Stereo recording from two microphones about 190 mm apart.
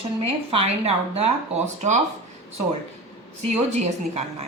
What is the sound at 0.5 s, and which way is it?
Speech, 30° right (ahead or behind).